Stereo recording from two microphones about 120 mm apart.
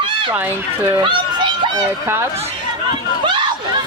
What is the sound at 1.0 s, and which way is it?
Speech, 40° right (ahead or behind).